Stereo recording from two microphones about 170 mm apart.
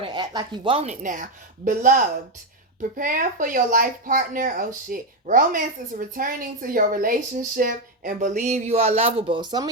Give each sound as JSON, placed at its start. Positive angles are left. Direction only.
{"t": 0.0, "sound": "speech", "side_deg": -25}
{"t": 1.0, "sound": "speech", "side_deg": -50}